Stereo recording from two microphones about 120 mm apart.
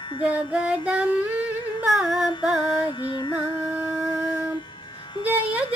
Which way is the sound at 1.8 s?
Centre (ahead or behind).